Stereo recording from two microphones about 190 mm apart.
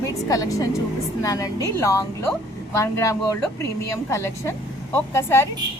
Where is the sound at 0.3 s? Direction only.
20° left (ahead or behind).